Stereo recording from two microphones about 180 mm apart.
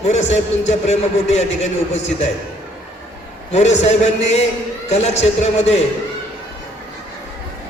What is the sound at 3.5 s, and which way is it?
A man's voice, 40° left (ahead or behind).